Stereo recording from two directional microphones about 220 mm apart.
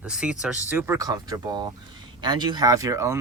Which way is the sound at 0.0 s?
5° right (ahead or behind).